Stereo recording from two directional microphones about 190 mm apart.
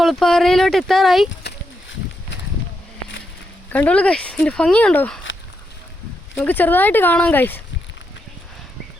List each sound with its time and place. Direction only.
0.0 s speech: centre (ahead or behind)
1.5 s a sound: 70° left (ahead or behind)
3.7 s speech: 5° left (ahead or behind)
6.3 s speech: 10° left (ahead or behind)